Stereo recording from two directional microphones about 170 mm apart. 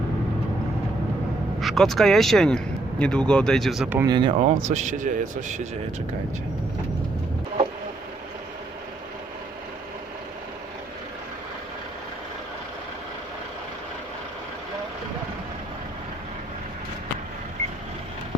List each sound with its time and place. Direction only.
1.6 s speech: centre (ahead or behind)
3.9 s speech: 25° right (ahead or behind)
4.4 s speech: 45° right (ahead or behind)